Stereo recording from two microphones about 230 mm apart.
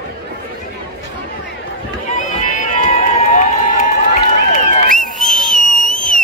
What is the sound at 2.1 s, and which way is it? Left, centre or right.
Run, left.